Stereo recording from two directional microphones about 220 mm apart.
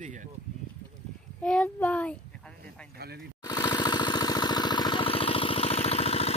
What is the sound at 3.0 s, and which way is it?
Speech, 45° right (ahead or behind).